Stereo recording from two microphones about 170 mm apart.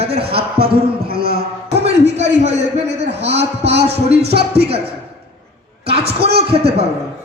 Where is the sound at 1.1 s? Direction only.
65° right (ahead or behind).